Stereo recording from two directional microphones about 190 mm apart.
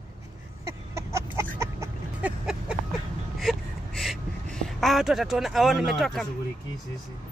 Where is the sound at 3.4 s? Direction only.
Centre (ahead or behind).